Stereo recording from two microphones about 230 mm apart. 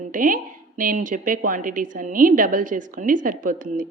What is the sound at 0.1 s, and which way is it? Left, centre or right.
A woman's voice, right.